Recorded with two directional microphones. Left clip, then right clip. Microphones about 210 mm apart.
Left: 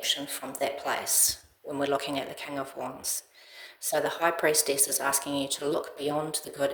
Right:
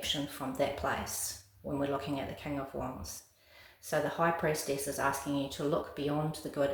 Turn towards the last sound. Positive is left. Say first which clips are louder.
# left 3 dB
turn(degrees=35)  # may be behind; listen again after turning